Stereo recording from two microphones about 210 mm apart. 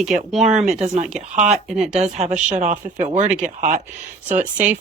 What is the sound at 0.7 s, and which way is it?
Speech, 35° right (ahead or behind).